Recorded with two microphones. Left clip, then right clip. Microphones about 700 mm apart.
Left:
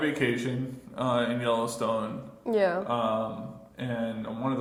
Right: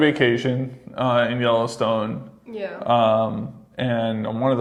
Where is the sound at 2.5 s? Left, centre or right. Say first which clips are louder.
Left 6 dB; left.